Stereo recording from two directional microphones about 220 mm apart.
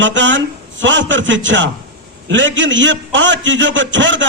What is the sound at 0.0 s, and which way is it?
A man's voice, 55° right (ahead or behind).